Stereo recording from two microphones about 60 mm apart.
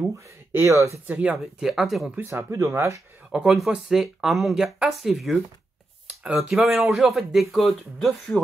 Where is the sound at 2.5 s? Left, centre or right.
Right.